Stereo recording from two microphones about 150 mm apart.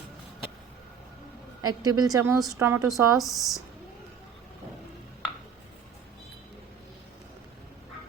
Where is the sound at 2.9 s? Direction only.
Centre (ahead or behind).